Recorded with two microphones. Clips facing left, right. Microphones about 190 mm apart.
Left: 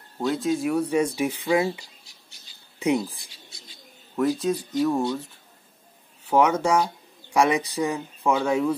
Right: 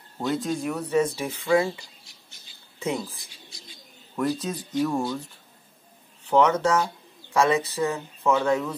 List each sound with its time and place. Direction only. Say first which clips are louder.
0.3 s speech: left 3 dB; centre (ahead or behind); by 3.6 s 20° left (ahead or behind)
4.2 s speech: left 4 dB; centre (ahead or behind)
6.3 s speech: even; 10° left (ahead or behind)